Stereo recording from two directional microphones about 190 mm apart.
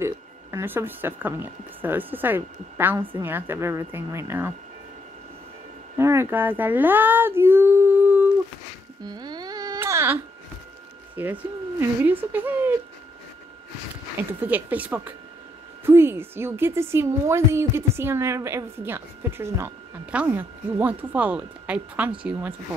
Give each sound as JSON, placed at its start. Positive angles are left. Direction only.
{"t": 0.0, "sound": "a woman's voice", "side_deg": -15}
{"t": 5.9, "sound": "speech", "side_deg": -15}
{"t": 9.0, "sound": "a sound", "side_deg": -20}
{"t": 11.2, "sound": "a woman's voice", "side_deg": -10}
{"t": 14.4, "sound": "a woman's voice", "side_deg": -10}